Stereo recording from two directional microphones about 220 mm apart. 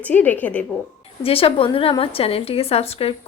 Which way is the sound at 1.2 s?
25° left (ahead or behind).